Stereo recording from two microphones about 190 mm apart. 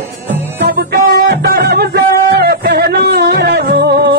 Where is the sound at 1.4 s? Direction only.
55° right (ahead or behind).